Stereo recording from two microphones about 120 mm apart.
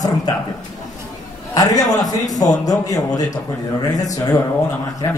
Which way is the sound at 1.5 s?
30° left (ahead or behind).